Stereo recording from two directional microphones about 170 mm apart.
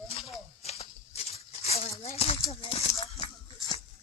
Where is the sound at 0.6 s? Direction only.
40° left (ahead or behind).